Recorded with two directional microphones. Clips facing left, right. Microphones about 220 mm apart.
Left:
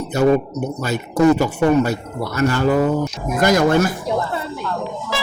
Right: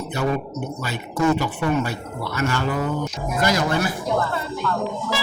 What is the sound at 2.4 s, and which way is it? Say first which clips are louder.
Speech: left 7 dB; 40° left (ahead or behind).